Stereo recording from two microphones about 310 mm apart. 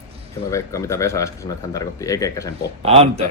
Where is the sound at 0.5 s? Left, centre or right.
Centre.